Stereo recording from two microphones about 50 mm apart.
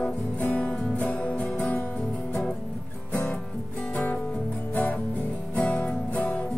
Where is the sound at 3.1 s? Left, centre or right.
Left.